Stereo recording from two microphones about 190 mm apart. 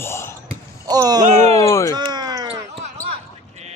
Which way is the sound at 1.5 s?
15° left (ahead or behind).